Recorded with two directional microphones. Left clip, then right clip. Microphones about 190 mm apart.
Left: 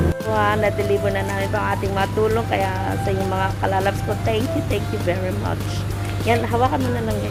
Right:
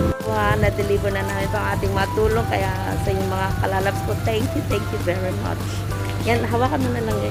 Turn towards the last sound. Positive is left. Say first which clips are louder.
# left 2 dB
turn(degrees=-15)  # may be behind; listen again after turning